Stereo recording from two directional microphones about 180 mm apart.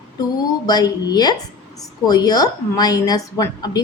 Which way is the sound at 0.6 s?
20° left (ahead or behind).